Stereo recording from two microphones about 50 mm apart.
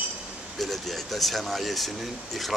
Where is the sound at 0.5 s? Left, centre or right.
Centre.